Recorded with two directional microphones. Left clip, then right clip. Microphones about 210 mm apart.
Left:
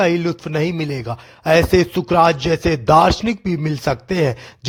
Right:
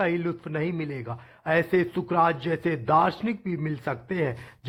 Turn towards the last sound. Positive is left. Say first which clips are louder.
# left 10 dB
turn(degrees=50)  # may be behind; listen again after turning